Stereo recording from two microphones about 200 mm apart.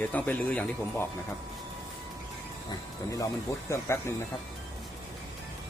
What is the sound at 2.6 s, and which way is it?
Speech, 15° left (ahead or behind).